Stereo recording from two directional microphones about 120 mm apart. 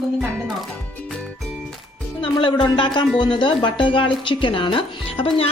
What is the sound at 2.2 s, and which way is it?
Speech, 45° left (ahead or behind).